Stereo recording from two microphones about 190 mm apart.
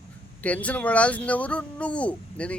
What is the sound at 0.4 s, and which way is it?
Speech, 5° left (ahead or behind).